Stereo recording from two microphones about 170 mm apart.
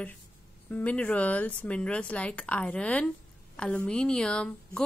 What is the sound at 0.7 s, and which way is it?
A woman's voice, 10° left (ahead or behind).